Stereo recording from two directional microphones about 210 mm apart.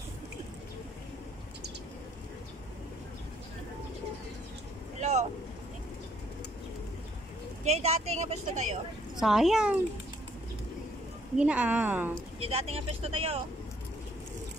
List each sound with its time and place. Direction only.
5.0 s boat: 30° right (ahead or behind)
7.6 s a woman's voice: 30° right (ahead or behind)
9.2 s speech: centre (ahead or behind)
11.3 s a woman's voice: 5° right (ahead or behind)
12.4 s speech: 30° right (ahead or behind)